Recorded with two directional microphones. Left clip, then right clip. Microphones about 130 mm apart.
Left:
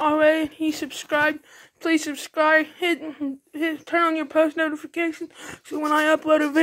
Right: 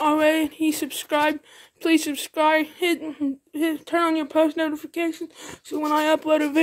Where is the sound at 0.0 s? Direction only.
25° right (ahead or behind); by 6.5 s 5° right (ahead or behind).